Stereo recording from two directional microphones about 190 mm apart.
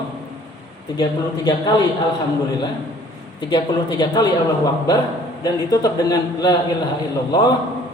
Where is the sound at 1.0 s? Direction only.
20° left (ahead or behind).